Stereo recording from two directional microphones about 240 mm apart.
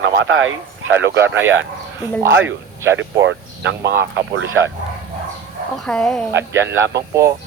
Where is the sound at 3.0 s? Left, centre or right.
Right.